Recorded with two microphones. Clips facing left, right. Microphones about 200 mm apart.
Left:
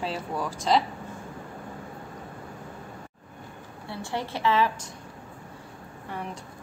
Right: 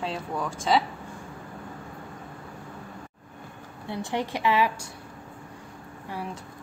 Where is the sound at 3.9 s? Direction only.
20° right (ahead or behind).